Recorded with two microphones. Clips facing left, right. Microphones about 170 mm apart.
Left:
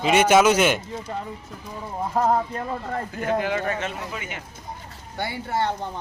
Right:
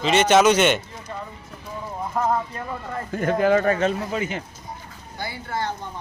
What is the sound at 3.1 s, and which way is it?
A man's voice, 45° right (ahead or behind).